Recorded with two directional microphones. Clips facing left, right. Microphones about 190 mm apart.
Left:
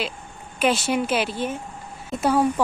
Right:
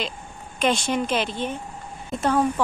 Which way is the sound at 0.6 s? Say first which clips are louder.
Left 1 dB; 5° left (ahead or behind).